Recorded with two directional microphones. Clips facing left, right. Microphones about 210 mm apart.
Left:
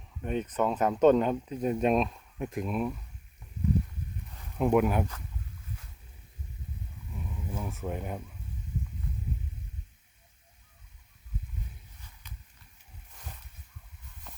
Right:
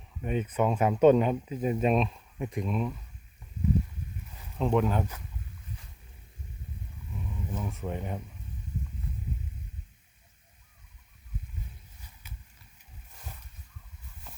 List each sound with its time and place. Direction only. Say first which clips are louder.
0.2 s speech: right 1 dB; 5° right (ahead or behind)
4.5 s speech: left 2 dB; 10° left (ahead or behind)
7.5 s speech: even; 5° left (ahead or behind)